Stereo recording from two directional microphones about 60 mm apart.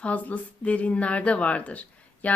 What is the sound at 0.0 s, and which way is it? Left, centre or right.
Speech, left.